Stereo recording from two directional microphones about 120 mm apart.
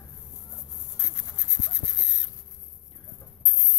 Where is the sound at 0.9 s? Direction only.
25° left (ahead or behind).